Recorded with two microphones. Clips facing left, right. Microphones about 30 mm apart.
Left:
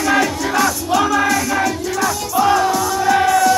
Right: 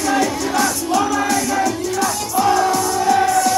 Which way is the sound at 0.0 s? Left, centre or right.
Left.